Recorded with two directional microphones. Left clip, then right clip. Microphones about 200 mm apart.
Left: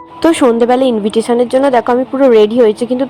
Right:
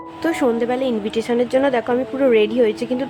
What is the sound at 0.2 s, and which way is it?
A woman's voice, 25° left (ahead or behind).